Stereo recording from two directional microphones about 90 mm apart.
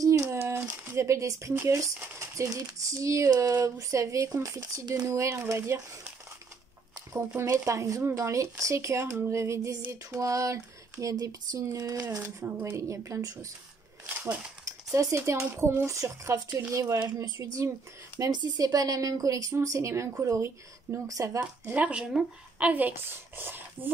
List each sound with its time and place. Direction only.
0.0 s a sound: 35° right (ahead or behind)
0.9 s speech: 35° right (ahead or behind)
7.2 s speech: 30° right (ahead or behind)
21.6 s speech: 15° right (ahead or behind)